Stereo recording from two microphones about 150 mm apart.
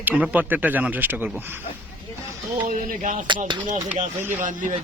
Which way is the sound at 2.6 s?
60° right (ahead or behind).